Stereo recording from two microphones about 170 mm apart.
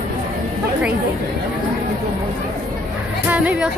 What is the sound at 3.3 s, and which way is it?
Speech, 10° right (ahead or behind).